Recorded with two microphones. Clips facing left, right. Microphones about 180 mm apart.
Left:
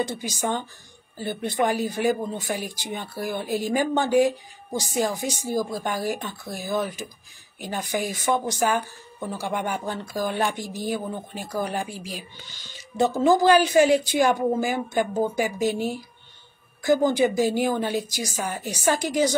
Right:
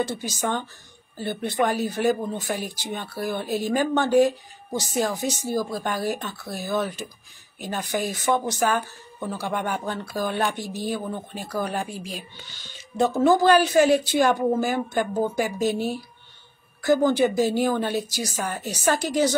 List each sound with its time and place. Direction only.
0.0 s speech: 15° left (ahead or behind)